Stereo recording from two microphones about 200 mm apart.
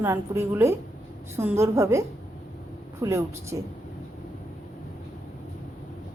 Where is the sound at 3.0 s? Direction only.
15° right (ahead or behind).